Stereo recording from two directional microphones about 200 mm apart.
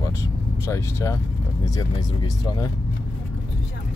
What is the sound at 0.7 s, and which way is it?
Speech, 15° left (ahead or behind).